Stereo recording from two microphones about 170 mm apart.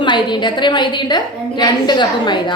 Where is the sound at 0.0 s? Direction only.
25° left (ahead or behind).